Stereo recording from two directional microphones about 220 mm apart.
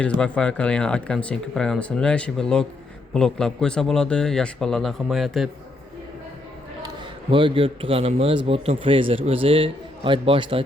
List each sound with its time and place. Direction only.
0.2 s speech: 5° left (ahead or behind)
6.8 s a man's voice: 25° right (ahead or behind)